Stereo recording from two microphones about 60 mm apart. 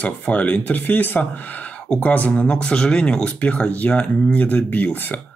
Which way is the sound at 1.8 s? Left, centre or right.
Left.